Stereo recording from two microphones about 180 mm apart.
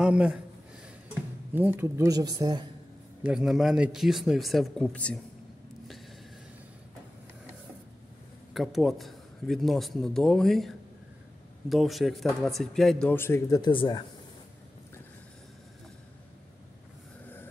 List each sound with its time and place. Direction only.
0.0 s speech: 5° right (ahead or behind)
1.5 s speech: 10° right (ahead or behind)
3.3 s a man's voice: centre (ahead or behind)
8.5 s a man's voice: centre (ahead or behind)
11.7 s a man's voice: centre (ahead or behind)
13.6 s speech: 25° left (ahead or behind)